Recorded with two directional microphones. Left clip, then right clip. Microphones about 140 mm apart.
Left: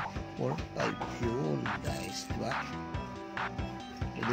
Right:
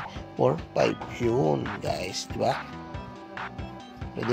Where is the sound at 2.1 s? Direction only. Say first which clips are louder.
Right 10 dB; 55° right (ahead or behind).